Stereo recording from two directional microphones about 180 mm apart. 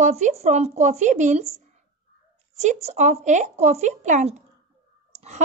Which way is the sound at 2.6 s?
40° right (ahead or behind).